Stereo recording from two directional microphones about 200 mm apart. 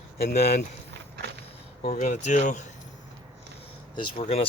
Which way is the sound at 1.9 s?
40° left (ahead or behind).